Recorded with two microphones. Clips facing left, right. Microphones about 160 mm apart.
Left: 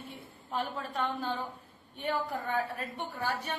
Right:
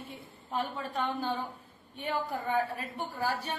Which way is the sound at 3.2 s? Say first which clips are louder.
Right 2 dB; 35° right (ahead or behind).